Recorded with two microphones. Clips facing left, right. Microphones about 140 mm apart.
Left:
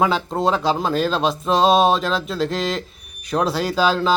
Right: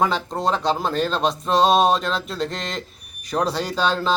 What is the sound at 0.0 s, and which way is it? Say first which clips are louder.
Speech: left 3 dB; 5° left (ahead or behind).